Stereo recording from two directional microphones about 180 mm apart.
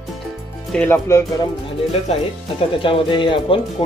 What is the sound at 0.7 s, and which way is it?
Speech, 10° left (ahead or behind).